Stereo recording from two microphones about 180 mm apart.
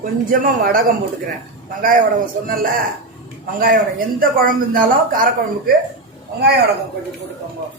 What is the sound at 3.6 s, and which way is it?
Speech, 55° right (ahead or behind).